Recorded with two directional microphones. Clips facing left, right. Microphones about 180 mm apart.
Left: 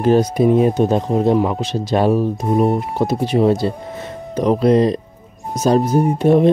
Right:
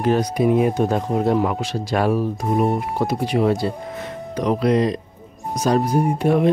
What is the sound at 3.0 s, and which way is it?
Speech, 25° left (ahead or behind).